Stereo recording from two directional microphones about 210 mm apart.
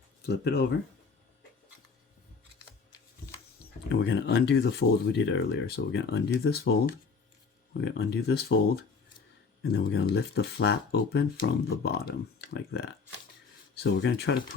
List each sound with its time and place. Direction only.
0.3 s speech: 50° left (ahead or behind)
3.8 s speech: 50° left (ahead or behind)